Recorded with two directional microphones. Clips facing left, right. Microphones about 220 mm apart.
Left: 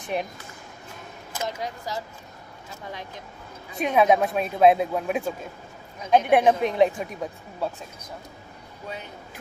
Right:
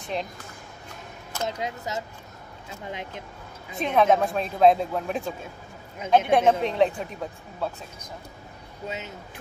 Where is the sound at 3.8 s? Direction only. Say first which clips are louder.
Left 1 dB; 10° left (ahead or behind).